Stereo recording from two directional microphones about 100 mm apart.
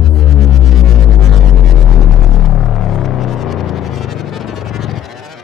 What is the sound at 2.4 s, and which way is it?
Music, centre (ahead or behind).